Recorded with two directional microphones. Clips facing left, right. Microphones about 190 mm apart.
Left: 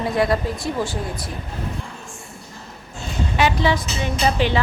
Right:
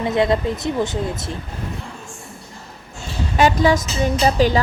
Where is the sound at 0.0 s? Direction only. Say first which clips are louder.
Right 2 dB; 20° right (ahead or behind).